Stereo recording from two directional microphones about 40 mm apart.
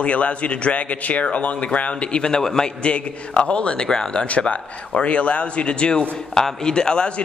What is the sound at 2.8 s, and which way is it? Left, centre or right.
A man's voice, left.